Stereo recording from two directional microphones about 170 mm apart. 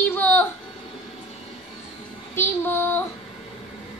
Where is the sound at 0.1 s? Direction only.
10° left (ahead or behind).